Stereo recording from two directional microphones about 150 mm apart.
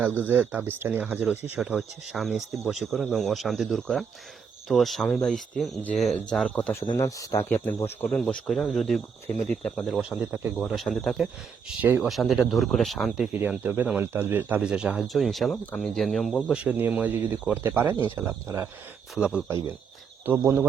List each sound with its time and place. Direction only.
0.0 s speech: 15° right (ahead or behind); by 6.6 s 5° left (ahead or behind)
6.6 s speech: 15° left (ahead or behind); by 10.5 s 10° right (ahead or behind)
10.6 s speech: centre (ahead or behind)
13.4 s speech: 10° right (ahead or behind); by 16.5 s 5° left (ahead or behind)
16.5 s speech: 10° right (ahead or behind)
19.1 s speech: centre (ahead or behind)
20.2 s speech: 15° right (ahead or behind)